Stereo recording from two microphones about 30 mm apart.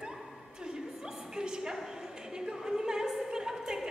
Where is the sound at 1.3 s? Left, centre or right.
Right.